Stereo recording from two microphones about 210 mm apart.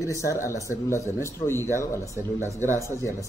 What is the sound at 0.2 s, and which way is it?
Speech, 15° left (ahead or behind).